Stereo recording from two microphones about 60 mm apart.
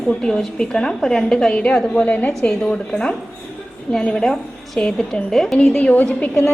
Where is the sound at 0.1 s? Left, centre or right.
Centre.